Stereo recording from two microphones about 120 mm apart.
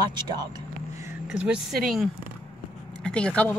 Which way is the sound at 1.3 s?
10° right (ahead or behind).